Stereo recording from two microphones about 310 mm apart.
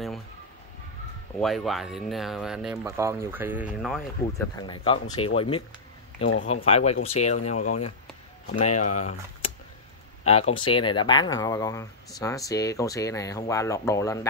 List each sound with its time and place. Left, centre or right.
1.4 s speech: centre
4.2 s speech: centre
7.5 s speech: left
10.2 s speech: centre